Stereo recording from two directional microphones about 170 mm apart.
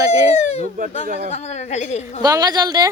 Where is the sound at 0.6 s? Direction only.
50° right (ahead or behind).